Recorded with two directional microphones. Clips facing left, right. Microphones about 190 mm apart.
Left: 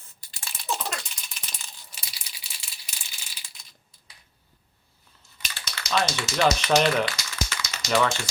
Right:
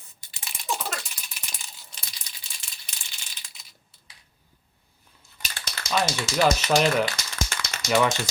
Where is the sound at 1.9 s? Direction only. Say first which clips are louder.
Even; 10° left (ahead or behind).